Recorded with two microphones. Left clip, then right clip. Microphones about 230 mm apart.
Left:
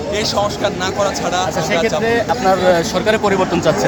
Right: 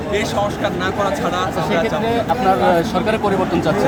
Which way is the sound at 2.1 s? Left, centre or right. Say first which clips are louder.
Left 1 dB; centre.